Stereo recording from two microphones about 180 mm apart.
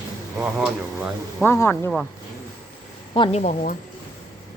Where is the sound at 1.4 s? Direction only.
15° left (ahead or behind).